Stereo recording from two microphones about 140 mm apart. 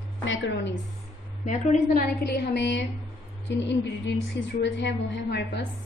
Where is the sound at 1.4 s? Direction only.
65° left (ahead or behind).